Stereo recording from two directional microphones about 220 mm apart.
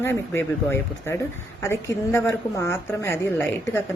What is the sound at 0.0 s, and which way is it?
A woman's voice, 10° left (ahead or behind).